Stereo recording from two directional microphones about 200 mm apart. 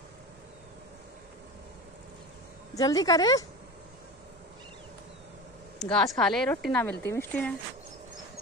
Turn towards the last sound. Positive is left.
turn(degrees=5)  # may be behind; listen again after turning